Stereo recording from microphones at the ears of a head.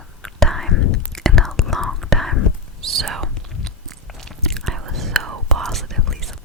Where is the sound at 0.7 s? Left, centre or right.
Left.